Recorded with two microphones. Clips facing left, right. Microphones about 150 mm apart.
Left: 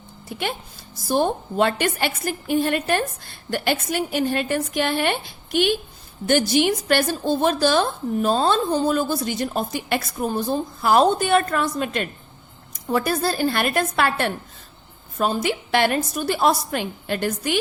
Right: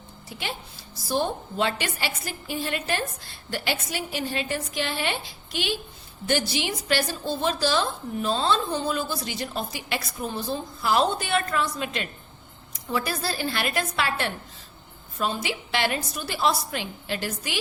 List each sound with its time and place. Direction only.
0.3 s a woman's voice: 55° left (ahead or behind)